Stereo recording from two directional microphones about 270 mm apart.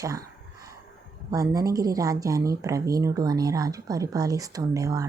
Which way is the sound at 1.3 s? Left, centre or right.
Centre.